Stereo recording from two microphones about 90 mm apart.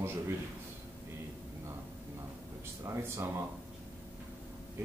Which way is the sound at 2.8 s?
30° right (ahead or behind).